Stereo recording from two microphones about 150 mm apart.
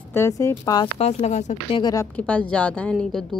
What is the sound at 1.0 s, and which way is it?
Speech, 45° left (ahead or behind).